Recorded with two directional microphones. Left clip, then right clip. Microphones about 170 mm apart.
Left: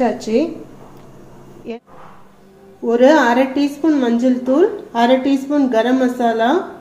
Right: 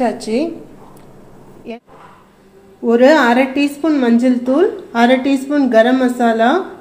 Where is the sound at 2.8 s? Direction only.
25° right (ahead or behind).